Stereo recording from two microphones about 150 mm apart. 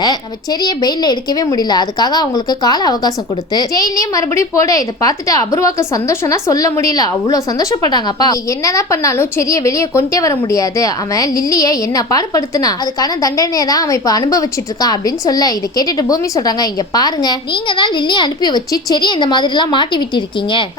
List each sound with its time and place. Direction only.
0.6 s a woman's voice: 25° left (ahead or behind)